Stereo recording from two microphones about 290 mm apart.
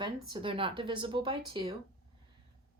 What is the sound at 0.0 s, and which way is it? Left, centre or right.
Speech, centre.